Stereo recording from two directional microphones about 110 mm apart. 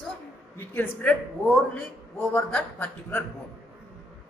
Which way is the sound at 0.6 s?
15° left (ahead or behind).